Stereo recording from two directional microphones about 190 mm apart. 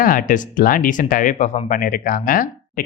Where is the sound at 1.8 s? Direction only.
55° left (ahead or behind).